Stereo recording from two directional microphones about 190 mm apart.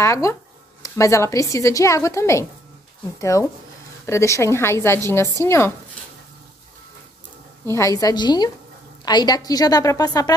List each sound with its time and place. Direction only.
0.0 s a woman's voice: 15° left (ahead or behind)
7.6 s a woman's voice: 15° left (ahead or behind)